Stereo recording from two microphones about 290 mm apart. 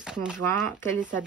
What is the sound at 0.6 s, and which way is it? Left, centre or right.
Speech, centre.